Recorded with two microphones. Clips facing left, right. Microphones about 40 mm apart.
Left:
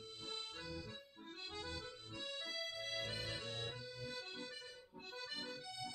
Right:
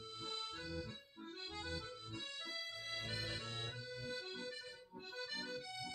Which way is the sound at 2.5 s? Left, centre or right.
Right.